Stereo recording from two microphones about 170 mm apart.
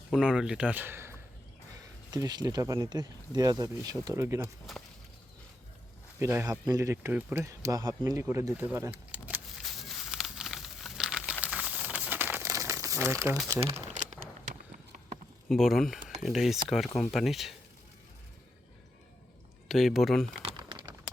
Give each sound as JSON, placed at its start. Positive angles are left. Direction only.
{"t": 0.1, "sound": "speech", "side_deg": -5}
{"t": 6.1, "sound": "a sound", "side_deg": -15}
{"t": 11.4, "sound": "crumpling", "side_deg": -5}
{"t": 13.6, "sound": "crumpling", "side_deg": -35}
{"t": 15.4, "sound": "speech", "side_deg": 0}
{"t": 19.6, "sound": "speech", "side_deg": 0}
{"t": 20.4, "sound": "typing", "side_deg": -30}